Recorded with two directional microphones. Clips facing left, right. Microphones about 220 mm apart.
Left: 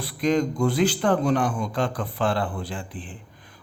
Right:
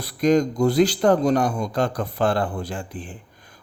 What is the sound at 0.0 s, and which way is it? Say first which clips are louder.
A man's voice: right 4 dB; 40° right (ahead or behind).